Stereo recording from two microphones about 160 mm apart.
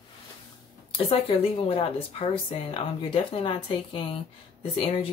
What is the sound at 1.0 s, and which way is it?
Speech, 35° left (ahead or behind).